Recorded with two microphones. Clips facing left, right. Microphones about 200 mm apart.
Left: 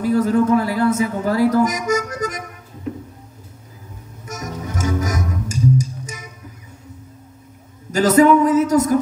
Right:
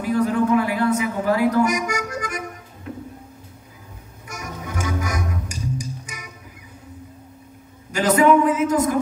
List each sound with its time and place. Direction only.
0.0 s a woman's voice: 40° left (ahead or behind)
4.3 s music: 40° left (ahead or behind)
7.9 s a sound: 40° left (ahead or behind)